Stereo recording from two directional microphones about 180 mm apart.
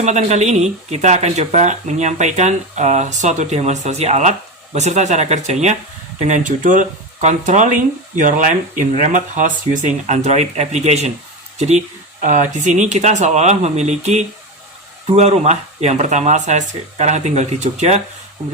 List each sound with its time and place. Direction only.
0.0 s speech: 40° right (ahead or behind)